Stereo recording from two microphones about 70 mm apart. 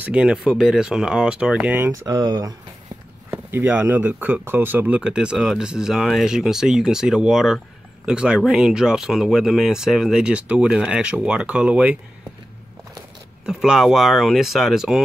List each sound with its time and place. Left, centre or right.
0.0 s speech: centre
1.9 s speech: right
3.3 s speech: right
5.1 s speech: centre
13.5 s speech: centre